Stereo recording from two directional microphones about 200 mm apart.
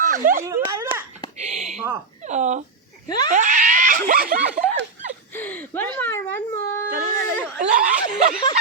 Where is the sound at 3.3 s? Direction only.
40° right (ahead or behind).